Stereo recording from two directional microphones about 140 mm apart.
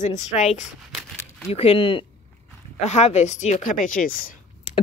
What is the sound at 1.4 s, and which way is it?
Speech, 45° left (ahead or behind).